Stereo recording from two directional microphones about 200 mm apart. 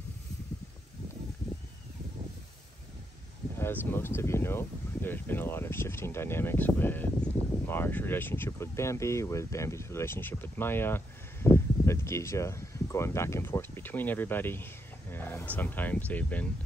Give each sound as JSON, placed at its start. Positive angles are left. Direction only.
{"t": 3.5, "sound": "speech", "side_deg": 10}